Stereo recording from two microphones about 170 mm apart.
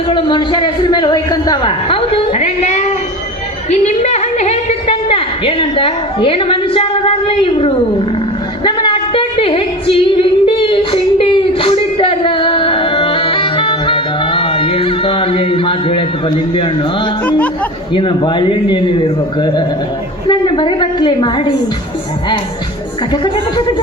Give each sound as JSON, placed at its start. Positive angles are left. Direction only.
{"t": 0.1, "sound": "a man's voice", "side_deg": 30}
{"t": 8.6, "sound": "a sound", "side_deg": 30}
{"t": 17.9, "sound": "a man's voice", "side_deg": 30}
{"t": 23.1, "sound": "a man's voice", "side_deg": 25}